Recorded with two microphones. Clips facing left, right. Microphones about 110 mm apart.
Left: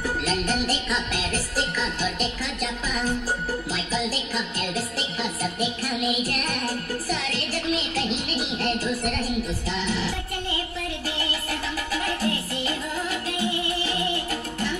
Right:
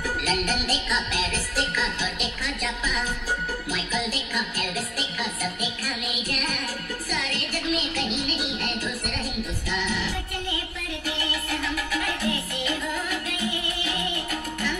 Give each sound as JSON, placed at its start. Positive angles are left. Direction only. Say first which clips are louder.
{"t": 0.0, "sound": "music", "louder": "left 1 dB", "side_deg": 30}
{"t": 11.9, "sound": "music", "louder": "left 3 dB", "side_deg": 35}